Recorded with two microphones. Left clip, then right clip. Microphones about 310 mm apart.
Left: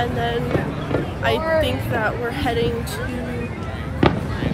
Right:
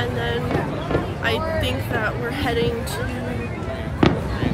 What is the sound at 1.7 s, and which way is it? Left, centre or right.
Speech, centre.